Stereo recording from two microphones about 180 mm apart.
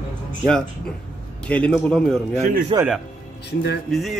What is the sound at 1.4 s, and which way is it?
A man's voice, 5° left (ahead or behind).